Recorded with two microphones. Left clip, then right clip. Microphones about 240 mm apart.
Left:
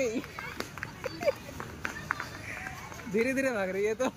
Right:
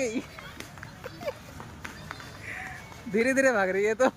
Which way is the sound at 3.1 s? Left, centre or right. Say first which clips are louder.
Right 6 dB; centre.